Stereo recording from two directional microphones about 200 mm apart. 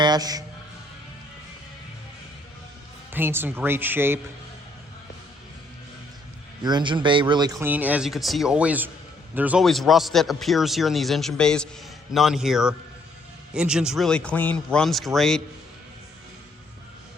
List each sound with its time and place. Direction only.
0.0 s a man's voice: 20° right (ahead or behind)
3.1 s speech: 10° right (ahead or behind)
6.6 s a man's voice: 20° right (ahead or behind); by 15.4 s centre (ahead or behind)